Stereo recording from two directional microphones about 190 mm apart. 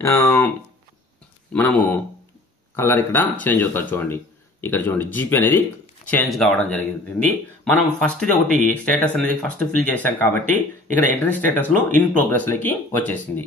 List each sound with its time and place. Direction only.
0.0 s speech: 10° left (ahead or behind)
1.5 s speech: 5° left (ahead or behind)
10.4 s speech: 40° right (ahead or behind)
11.4 s speech: 10° left (ahead or behind)